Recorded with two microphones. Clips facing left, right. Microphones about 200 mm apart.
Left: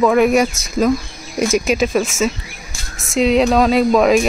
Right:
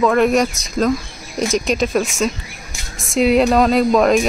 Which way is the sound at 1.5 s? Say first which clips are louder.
Left 1 dB; 5° left (ahead or behind).